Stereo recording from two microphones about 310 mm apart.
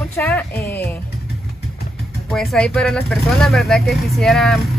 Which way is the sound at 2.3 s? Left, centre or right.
Centre.